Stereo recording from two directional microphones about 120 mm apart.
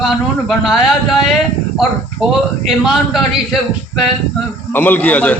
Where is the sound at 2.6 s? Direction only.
Centre (ahead or behind).